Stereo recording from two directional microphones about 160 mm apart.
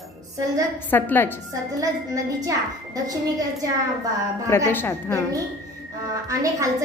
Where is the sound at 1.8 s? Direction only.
20° right (ahead or behind).